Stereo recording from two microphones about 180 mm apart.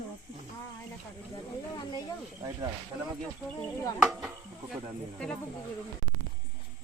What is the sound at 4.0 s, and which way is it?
Cricket, 5° right (ahead or behind).